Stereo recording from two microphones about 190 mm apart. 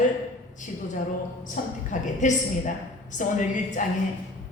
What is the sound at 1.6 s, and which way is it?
A woman's voice, 40° left (ahead or behind).